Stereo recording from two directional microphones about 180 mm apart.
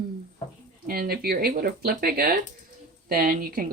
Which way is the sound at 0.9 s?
55° right (ahead or behind).